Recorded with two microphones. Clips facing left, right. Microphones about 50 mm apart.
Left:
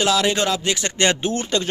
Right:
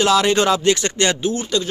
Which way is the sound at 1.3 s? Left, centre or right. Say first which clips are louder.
Right 1 dB; left.